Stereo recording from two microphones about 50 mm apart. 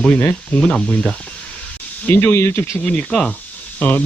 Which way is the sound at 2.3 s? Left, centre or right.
Left.